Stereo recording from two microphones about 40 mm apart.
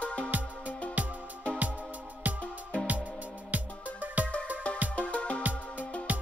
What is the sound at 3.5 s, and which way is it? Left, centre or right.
Music, right.